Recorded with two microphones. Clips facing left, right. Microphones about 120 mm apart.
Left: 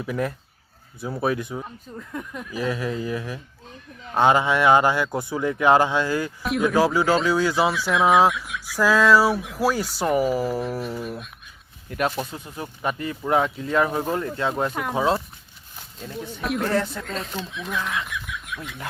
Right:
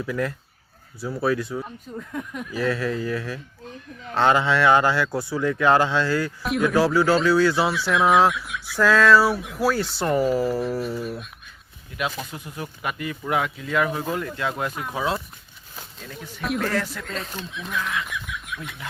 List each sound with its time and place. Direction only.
0.0 s speech: 25° left (ahead or behind)
2.0 s speech: centre (ahead or behind)
2.5 s speech: 15° left (ahead or behind)
6.4 s speech: centre (ahead or behind)
6.7 s speech: 15° left (ahead or behind)
7.7 s speech: centre (ahead or behind)
11.9 s speech: 45° left (ahead or behind)
12.3 s speech: 30° left (ahead or behind)
16.4 s speech: centre (ahead or behind)
16.7 s speech: 25° left (ahead or behind)
17.0 s speech: centre (ahead or behind)